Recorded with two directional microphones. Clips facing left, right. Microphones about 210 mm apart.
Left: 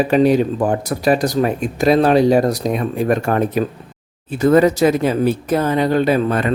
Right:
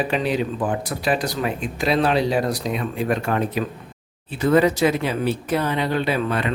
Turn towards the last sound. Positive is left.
turn(degrees=45)  # may be behind; listen again after turning